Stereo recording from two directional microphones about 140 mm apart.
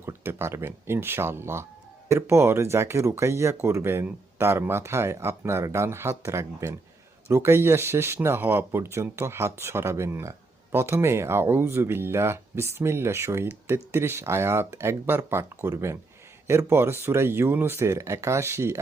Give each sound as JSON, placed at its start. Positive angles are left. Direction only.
{"t": 0.0, "sound": "speech", "side_deg": -15}